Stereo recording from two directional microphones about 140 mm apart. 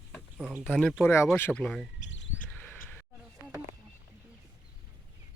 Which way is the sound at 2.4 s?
10° left (ahead or behind).